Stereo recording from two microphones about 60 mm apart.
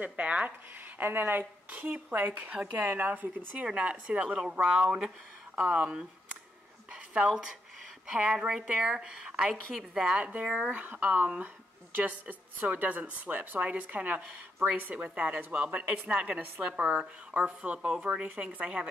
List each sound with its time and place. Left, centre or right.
0.0 s speech: right
0.9 s speech: right
3.6 s speech: centre
6.9 s a sound: centre
8.1 s a woman's voice: centre
10.1 s speech: right
10.7 s a woman's voice: right